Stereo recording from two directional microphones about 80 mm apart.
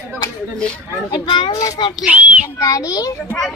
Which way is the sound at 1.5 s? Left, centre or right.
Left.